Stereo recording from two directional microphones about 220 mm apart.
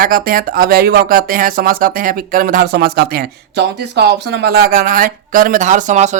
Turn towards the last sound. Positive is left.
turn(degrees=-30)  # may be behind; listen again after turning